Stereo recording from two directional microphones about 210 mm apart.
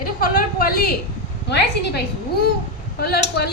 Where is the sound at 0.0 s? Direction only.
45° left (ahead or behind).